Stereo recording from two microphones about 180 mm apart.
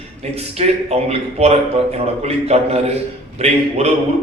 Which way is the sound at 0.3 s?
35° right (ahead or behind).